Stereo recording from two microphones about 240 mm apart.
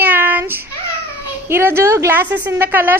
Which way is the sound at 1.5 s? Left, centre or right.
Centre.